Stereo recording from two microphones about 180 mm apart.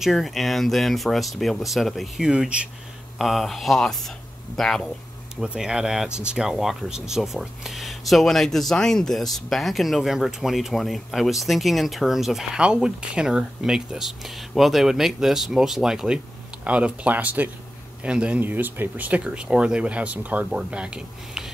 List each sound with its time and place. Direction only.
0.0 s speech: centre (ahead or behind)